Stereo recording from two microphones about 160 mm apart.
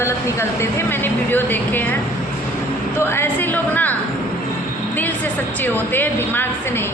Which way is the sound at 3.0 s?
15° left (ahead or behind).